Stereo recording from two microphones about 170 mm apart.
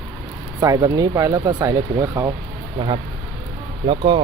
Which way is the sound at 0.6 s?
20° right (ahead or behind).